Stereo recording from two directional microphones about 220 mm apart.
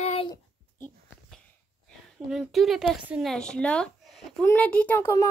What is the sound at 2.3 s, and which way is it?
A child's voice, centre (ahead or behind).